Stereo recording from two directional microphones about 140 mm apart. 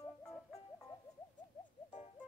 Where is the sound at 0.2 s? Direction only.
5° left (ahead or behind).